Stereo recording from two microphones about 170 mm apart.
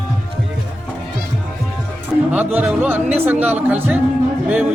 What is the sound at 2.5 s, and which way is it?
Music, 10° right (ahead or behind).